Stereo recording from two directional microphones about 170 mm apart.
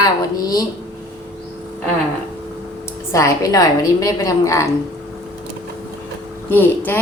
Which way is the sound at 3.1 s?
20° left (ahead or behind).